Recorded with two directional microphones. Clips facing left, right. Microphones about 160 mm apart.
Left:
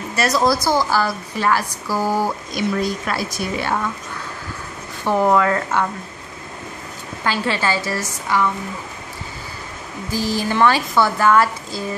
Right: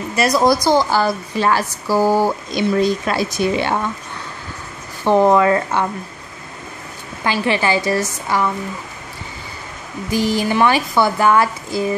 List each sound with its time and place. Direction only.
0.1 s speech: 15° right (ahead or behind)
5.0 s speech: 20° right (ahead or behind)
7.2 s speech: 15° right (ahead or behind)
10.1 s speech: 15° right (ahead or behind)